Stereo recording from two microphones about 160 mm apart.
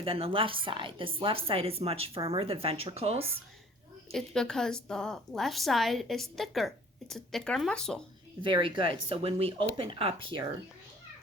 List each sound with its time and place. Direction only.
0.0 s speech: 35° right (ahead or behind)
4.1 s a woman's voice: 5° left (ahead or behind)
8.4 s speech: 30° right (ahead or behind)